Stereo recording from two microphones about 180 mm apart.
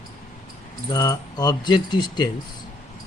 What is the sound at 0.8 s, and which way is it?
Speech, 20° left (ahead or behind).